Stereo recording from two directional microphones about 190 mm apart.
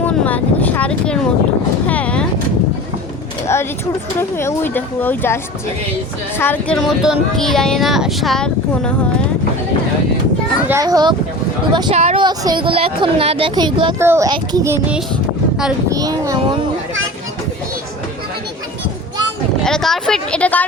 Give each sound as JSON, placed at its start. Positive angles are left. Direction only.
{"t": 0.0, "sound": "speech", "side_deg": 10}
{"t": 1.9, "sound": "vehicle", "side_deg": 5}
{"t": 3.4, "sound": "speech", "side_deg": 15}
{"t": 6.4, "sound": "speech", "side_deg": 10}
{"t": 6.7, "sound": "speech", "side_deg": 0}
{"t": 10.7, "sound": "speech", "side_deg": -20}
{"t": 11.9, "sound": "speech", "side_deg": -35}
{"t": 12.2, "sound": "speech", "side_deg": -20}
{"t": 14.0, "sound": "a child's voice", "side_deg": -15}
{"t": 19.6, "sound": "speech", "side_deg": 5}